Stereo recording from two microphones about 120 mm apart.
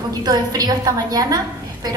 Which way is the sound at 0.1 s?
30° right (ahead or behind).